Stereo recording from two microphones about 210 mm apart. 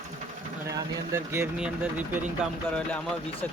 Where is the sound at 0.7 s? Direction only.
15° right (ahead or behind).